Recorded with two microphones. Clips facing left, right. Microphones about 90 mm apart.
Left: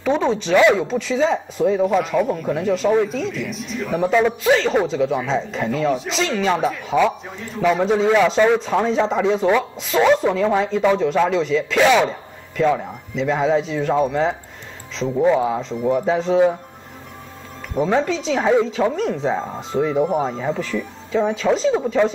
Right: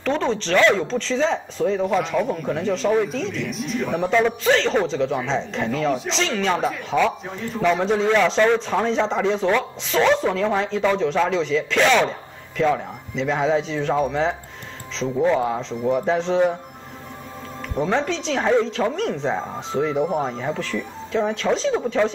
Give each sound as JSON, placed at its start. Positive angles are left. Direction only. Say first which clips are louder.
{"t": 0.0, "sound": "speech", "louder": "left 3 dB", "side_deg": 10}
{"t": 17.7, "sound": "speech", "louder": "left 3 dB", "side_deg": 5}